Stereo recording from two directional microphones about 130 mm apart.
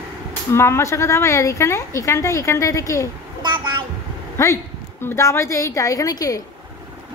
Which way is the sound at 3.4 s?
35° right (ahead or behind).